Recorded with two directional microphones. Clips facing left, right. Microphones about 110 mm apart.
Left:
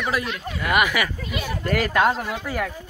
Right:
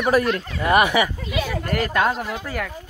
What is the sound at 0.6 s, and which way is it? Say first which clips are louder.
Speech: right 4 dB; 30° right (ahead or behind).